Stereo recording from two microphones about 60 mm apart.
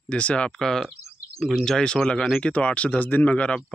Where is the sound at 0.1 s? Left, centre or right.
Centre.